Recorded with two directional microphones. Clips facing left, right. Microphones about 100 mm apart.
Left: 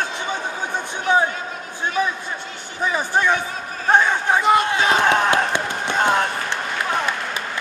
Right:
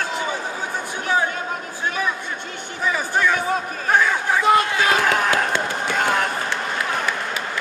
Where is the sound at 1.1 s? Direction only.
20° left (ahead or behind).